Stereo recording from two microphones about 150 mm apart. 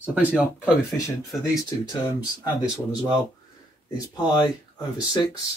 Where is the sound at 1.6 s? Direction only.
25° left (ahead or behind).